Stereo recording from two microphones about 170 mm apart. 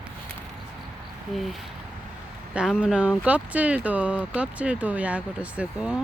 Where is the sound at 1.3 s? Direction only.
Centre (ahead or behind).